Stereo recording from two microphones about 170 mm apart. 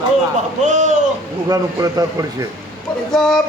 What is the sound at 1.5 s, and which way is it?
Speech, 20° right (ahead or behind).